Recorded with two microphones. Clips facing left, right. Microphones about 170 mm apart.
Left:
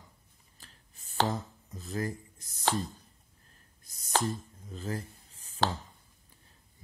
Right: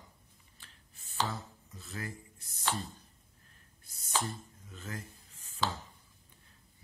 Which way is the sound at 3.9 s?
35° left (ahead or behind).